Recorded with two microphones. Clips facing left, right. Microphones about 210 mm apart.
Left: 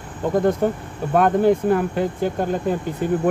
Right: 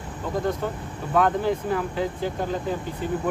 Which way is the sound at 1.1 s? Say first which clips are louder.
Left 6 dB; 55° left (ahead or behind).